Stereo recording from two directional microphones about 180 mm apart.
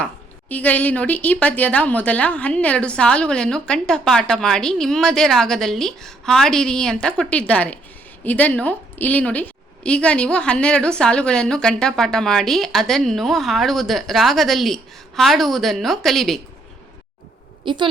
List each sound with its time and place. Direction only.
0.0 s a woman's voice: 10° left (ahead or behind)
17.7 s a woman's voice: 25° right (ahead or behind)